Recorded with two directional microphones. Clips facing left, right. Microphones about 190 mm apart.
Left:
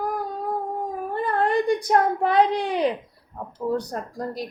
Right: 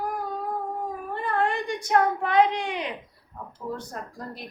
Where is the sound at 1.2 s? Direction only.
40° left (ahead or behind).